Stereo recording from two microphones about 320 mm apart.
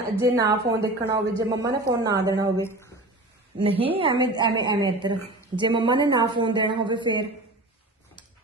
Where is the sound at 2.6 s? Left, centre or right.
Centre.